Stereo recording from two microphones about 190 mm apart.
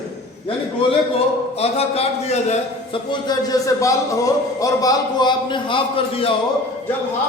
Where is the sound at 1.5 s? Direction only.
30° left (ahead or behind).